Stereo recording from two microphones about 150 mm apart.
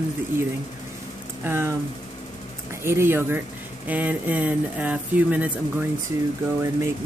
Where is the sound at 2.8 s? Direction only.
15° right (ahead or behind).